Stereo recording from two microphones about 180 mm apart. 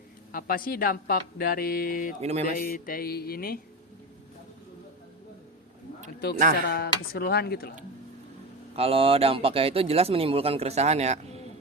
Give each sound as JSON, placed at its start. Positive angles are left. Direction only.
{"t": 0.3, "sound": "speech", "side_deg": 55}
{"t": 2.2, "sound": "a man's voice", "side_deg": -35}
{"t": 2.5, "sound": "speech", "side_deg": 55}
{"t": 6.7, "sound": "speech", "side_deg": 65}
{"t": 8.7, "sound": "a man's voice", "side_deg": -30}